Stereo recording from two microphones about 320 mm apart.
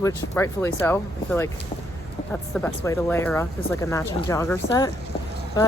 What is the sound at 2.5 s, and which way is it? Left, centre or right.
Speech, centre.